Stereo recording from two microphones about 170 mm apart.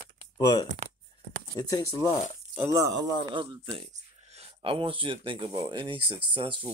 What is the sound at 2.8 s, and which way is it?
Speech, 90° right.